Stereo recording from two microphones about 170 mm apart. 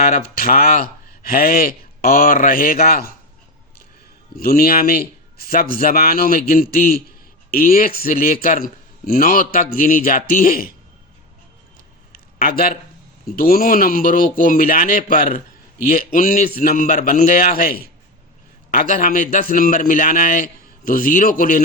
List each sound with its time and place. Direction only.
0.0 s speech: 60° left (ahead or behind)
4.4 s speech: 60° left (ahead or behind)
12.1 s a sound: 60° left (ahead or behind)
13.3 s a man's voice: 60° left (ahead or behind)